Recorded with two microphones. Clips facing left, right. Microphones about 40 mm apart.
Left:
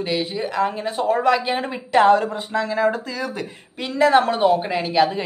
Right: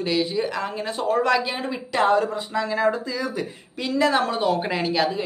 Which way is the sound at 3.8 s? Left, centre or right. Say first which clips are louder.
Left 4 dB; left.